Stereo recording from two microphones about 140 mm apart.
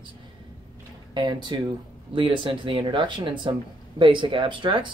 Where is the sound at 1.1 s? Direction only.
35° right (ahead or behind).